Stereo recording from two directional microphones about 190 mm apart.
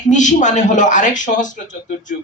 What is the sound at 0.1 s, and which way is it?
A man's voice, 40° left (ahead or behind).